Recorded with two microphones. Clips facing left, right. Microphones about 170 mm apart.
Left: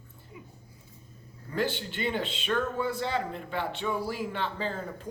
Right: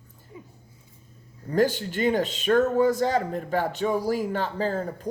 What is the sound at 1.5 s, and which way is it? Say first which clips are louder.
A man's voice: right 8 dB; 40° right (ahead or behind).